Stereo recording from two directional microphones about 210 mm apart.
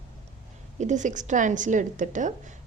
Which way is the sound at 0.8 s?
35° right (ahead or behind).